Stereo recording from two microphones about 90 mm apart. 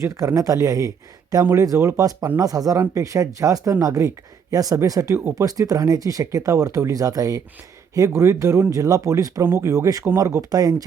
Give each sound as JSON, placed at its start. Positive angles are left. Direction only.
{"t": 0.0, "sound": "speech", "side_deg": -40}